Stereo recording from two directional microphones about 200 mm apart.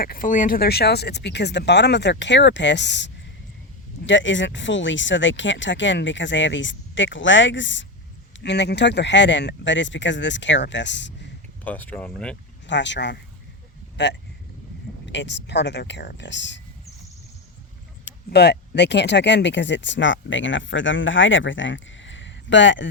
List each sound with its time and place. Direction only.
0.0 s speech: 45° left (ahead or behind); by 11.1 s 65° left (ahead or behind)
11.6 s speech: 10° left (ahead or behind)
12.6 s speech: 60° left (ahead or behind)
18.3 s speech: 55° left (ahead or behind)